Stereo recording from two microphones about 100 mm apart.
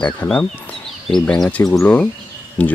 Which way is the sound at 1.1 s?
5° left (ahead or behind).